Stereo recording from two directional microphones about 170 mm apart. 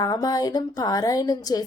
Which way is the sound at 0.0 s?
20° left (ahead or behind).